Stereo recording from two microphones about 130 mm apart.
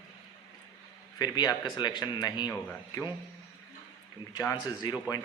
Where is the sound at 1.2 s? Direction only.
30° left (ahead or behind).